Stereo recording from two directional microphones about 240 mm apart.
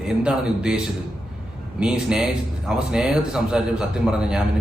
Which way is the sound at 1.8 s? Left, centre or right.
Centre.